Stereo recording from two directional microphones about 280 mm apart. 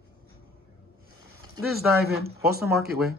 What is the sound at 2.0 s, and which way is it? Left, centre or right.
Speech, right.